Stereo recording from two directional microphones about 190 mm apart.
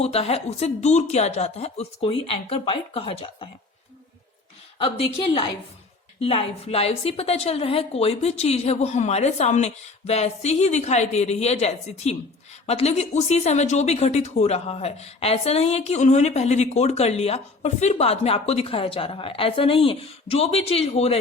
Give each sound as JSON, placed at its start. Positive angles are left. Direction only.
{"t": 0.0, "sound": "speech", "side_deg": 30}
{"t": 4.8, "sound": "a woman's voice", "side_deg": 25}